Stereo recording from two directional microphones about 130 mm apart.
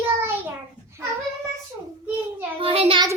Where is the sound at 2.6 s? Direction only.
45° right (ahead or behind).